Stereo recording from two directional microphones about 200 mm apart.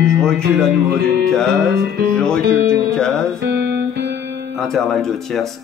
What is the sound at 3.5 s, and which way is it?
Music, 55° right (ahead or behind).